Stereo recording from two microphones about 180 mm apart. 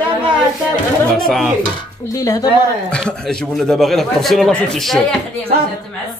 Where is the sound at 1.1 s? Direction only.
Centre (ahead or behind).